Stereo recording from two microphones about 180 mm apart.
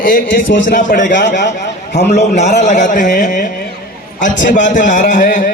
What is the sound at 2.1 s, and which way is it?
Speech, 40° left (ahead or behind).